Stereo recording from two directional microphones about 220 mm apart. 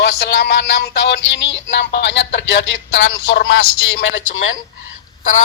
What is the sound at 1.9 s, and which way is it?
Speech, 55° left (ahead or behind).